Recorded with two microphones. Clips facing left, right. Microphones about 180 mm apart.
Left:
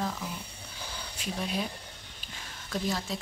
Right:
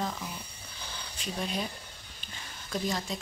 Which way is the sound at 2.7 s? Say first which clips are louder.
Even; centre (ahead or behind).